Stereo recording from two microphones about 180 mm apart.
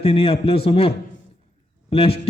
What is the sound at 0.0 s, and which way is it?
A man's voice, 30° left (ahead or behind).